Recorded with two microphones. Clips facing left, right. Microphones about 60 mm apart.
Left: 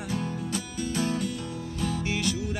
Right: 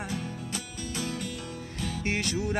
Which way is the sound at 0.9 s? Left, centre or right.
Left.